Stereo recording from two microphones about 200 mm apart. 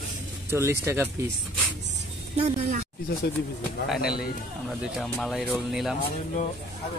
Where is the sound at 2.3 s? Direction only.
30° right (ahead or behind).